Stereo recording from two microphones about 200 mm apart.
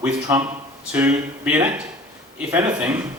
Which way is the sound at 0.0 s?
5° right (ahead or behind).